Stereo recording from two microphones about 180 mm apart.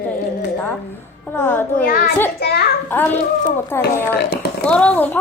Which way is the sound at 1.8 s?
50° left (ahead or behind).